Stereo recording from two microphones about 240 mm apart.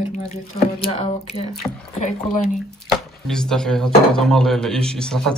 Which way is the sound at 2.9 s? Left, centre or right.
Centre.